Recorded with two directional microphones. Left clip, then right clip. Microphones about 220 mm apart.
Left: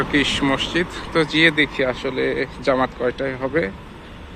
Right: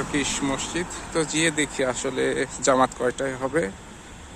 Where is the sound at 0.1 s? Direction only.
10° right (ahead or behind).